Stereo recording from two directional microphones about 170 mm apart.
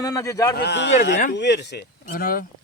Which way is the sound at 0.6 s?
90° left.